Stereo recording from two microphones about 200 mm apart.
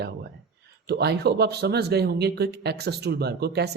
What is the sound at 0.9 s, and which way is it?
Speech, 55° right (ahead or behind).